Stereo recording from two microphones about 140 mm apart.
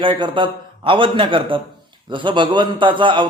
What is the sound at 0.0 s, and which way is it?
A man's voice, 35° right (ahead or behind).